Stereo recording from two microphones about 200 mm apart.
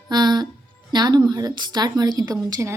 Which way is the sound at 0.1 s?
20° right (ahead or behind).